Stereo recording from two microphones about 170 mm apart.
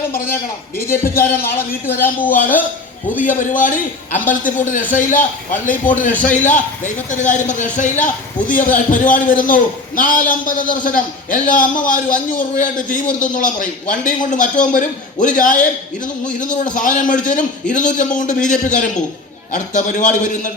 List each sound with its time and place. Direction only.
1.0 s a man's voice: 60° left (ahead or behind)
1.5 s speech: 10° left (ahead or behind)
3.2 s a man's voice: 50° left (ahead or behind)
16.7 s a man's voice: 50° left (ahead or behind)